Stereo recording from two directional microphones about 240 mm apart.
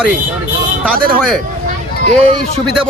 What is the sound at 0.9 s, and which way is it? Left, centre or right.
Speech, right.